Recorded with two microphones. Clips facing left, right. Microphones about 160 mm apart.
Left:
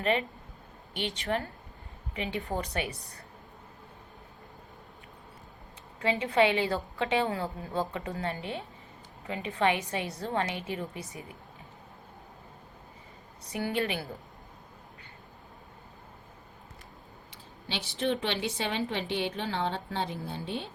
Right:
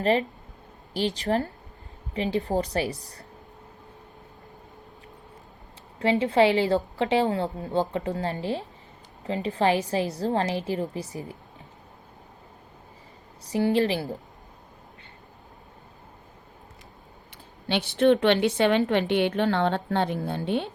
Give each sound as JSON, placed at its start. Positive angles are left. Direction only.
{"t": 0.0, "sound": "a woman's voice", "side_deg": -35}
{"t": 6.0, "sound": "a woman's voice", "side_deg": -30}
{"t": 13.4, "sound": "a woman's voice", "side_deg": -30}
{"t": 17.7, "sound": "a woman's voice", "side_deg": -65}